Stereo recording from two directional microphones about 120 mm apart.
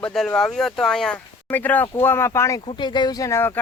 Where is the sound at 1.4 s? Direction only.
15° left (ahead or behind).